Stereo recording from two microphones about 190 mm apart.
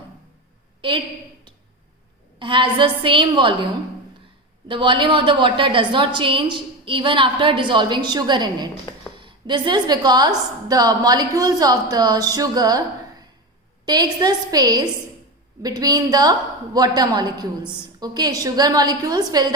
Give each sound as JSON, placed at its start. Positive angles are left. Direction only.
{"t": 0.8, "sound": "a woman's voice", "side_deg": -25}
{"t": 2.4, "sound": "a woman's voice", "side_deg": -25}
{"t": 4.7, "sound": "a woman's voice", "side_deg": -25}